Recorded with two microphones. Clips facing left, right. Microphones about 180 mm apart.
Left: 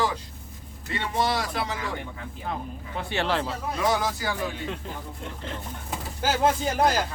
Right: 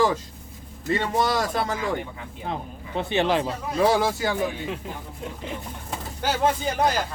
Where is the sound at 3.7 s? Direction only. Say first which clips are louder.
Right 6 dB; 30° right (ahead or behind).